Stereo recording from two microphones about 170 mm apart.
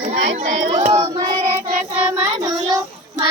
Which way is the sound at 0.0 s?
45° right (ahead or behind).